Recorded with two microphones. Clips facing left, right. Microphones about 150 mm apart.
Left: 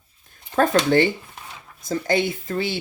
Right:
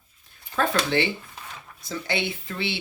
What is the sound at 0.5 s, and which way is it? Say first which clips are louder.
Speech: left 6 dB; 45° left (ahead or behind).